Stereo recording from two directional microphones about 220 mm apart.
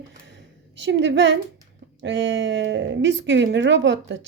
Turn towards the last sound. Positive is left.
turn(degrees=-55)  # may be behind; listen again after turning